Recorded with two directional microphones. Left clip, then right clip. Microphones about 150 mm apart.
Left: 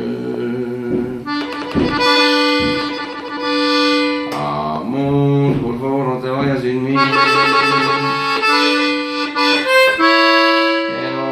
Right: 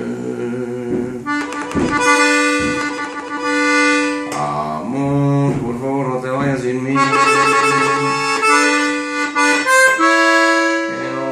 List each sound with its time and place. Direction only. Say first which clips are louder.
2.0 s accordion: even; 15° right (ahead or behind)
6.9 s accordion: even; 15° right (ahead or behind)